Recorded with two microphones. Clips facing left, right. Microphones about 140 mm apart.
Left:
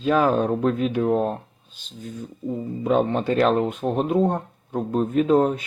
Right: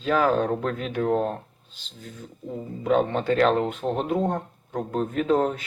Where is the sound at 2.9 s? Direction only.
15° left (ahead or behind).